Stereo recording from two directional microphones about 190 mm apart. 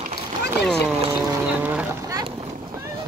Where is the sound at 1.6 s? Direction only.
5° right (ahead or behind).